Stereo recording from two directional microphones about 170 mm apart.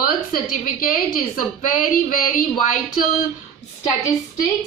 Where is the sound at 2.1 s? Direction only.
55° left (ahead or behind).